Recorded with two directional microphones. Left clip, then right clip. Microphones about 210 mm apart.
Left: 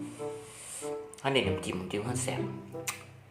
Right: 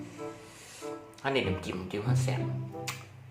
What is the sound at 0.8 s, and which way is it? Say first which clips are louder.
Speech: left 2 dB; 20° left (ahead or behind).